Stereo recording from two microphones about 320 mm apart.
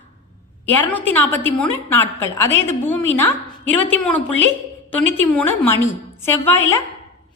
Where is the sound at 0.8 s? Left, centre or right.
Centre.